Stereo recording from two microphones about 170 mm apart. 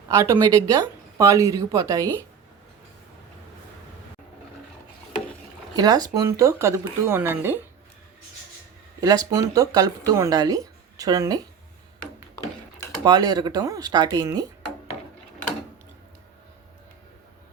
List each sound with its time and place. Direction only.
0.1 s speech: 20° right (ahead or behind)
5.7 s speech: 20° right (ahead or behind)
9.0 s speech: 20° right (ahead or behind)
13.1 s speech: 25° right (ahead or behind)